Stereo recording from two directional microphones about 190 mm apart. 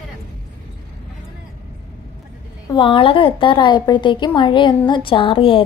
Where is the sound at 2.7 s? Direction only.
25° left (ahead or behind).